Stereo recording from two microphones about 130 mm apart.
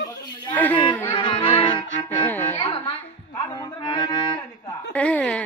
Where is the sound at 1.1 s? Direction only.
40° left (ahead or behind).